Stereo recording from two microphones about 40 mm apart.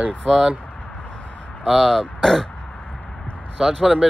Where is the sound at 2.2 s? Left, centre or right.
Centre.